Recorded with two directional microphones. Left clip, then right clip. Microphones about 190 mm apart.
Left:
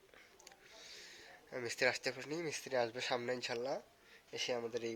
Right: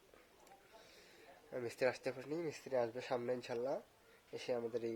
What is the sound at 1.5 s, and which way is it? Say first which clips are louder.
Speech: left 2 dB; 5° right (ahead or behind).